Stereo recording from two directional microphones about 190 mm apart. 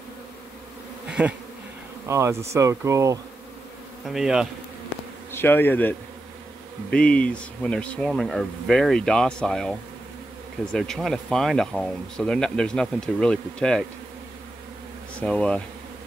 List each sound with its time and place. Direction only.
1.0 s bee: 5° right (ahead or behind)
2.0 s speech: 15° right (ahead or behind)
4.1 s speech: centre (ahead or behind)
5.3 s bee: 10° left (ahead or behind)
6.9 s speech: 5° left (ahead or behind)
15.1 s speech: 5° left (ahead or behind)